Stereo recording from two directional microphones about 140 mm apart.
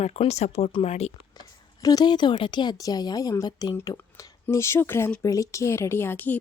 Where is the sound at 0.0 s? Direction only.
50° left (ahead or behind).